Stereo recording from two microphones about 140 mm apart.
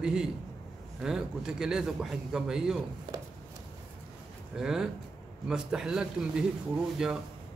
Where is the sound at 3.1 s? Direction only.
35° right (ahead or behind).